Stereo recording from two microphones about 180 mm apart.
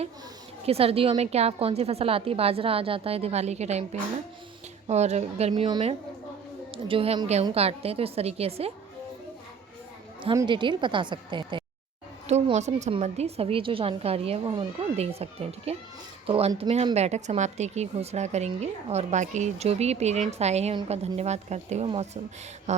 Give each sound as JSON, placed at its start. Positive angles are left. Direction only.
{"t": 0.6, "sound": "speech", "side_deg": -35}
{"t": 4.9, "sound": "speech", "side_deg": -40}
{"t": 10.3, "sound": "a woman's voice", "side_deg": -25}
{"t": 12.3, "sound": "speech", "side_deg": -40}